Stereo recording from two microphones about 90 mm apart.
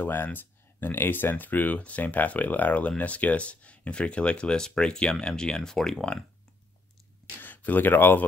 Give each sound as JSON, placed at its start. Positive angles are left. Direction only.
{"t": 0.0, "sound": "speech", "side_deg": 20}
{"t": 7.3, "sound": "speech", "side_deg": 20}